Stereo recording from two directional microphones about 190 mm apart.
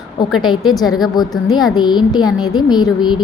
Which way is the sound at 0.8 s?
Centre (ahead or behind).